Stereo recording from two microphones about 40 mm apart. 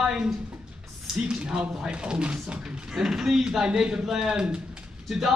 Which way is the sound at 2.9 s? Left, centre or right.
Centre.